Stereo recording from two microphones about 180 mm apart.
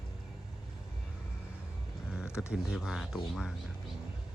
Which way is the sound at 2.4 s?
5° right (ahead or behind).